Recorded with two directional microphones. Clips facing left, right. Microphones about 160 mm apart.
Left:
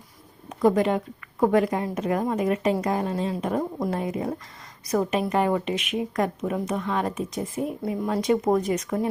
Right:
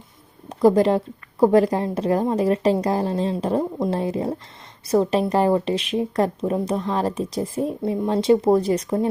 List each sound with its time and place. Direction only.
0.4 s a woman's voice: 35° right (ahead or behind)